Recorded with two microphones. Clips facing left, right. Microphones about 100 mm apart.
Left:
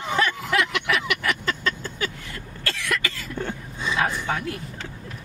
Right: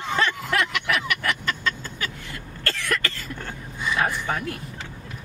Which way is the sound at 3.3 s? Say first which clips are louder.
Left 4 dB; 20° left (ahead or behind).